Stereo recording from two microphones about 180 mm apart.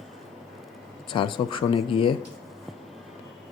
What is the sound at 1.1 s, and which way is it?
Speech, 25° left (ahead or behind).